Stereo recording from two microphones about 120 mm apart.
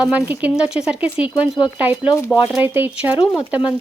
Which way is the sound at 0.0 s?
10° right (ahead or behind).